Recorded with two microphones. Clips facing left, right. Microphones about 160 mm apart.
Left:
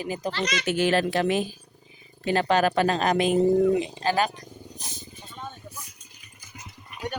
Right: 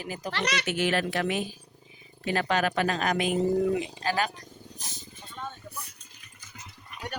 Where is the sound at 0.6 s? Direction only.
35° left (ahead or behind).